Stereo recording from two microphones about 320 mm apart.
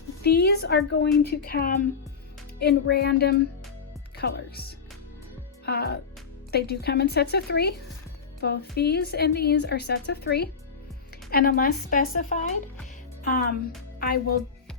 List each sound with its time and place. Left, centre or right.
0.2 s a woman's voice: left